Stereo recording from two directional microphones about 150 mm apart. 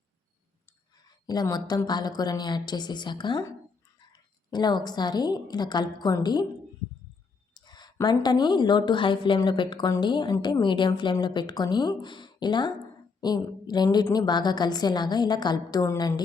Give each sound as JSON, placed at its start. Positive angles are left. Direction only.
{"t": 1.3, "sound": "a woman's voice", "side_deg": 25}
{"t": 4.5, "sound": "a woman's voice", "side_deg": 30}
{"t": 7.5, "sound": "a sound", "side_deg": 30}
{"t": 8.0, "sound": "a woman's voice", "side_deg": 30}